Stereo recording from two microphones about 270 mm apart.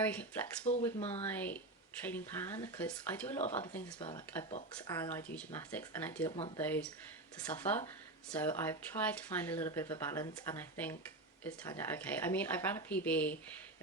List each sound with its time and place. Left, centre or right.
0.0 s speech: centre
0.7 s speech: left
1.3 s speech: centre
3.9 s speech: centre